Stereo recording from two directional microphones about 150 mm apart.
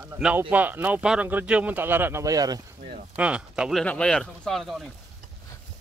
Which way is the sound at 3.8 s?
5° left (ahead or behind).